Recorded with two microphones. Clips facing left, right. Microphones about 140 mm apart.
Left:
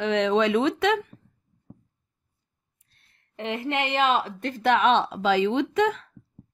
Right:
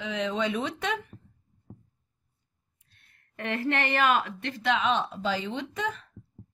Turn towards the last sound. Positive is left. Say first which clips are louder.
# left 10 dB
turn(degrees=90)